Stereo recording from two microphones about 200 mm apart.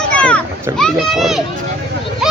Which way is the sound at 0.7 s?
Centre (ahead or behind).